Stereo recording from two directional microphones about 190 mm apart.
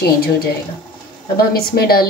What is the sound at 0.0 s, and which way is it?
A woman's voice, 55° left (ahead or behind).